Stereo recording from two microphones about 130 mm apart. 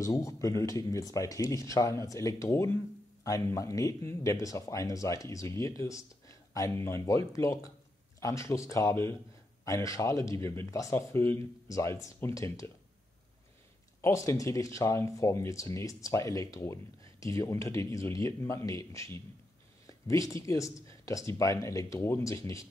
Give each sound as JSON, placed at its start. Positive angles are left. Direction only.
{"t": 0.0, "sound": "speech", "side_deg": 25}
{"t": 14.0, "sound": "speech", "side_deg": 25}